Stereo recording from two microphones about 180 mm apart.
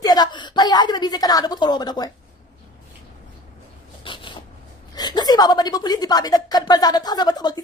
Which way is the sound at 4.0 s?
25° left (ahead or behind).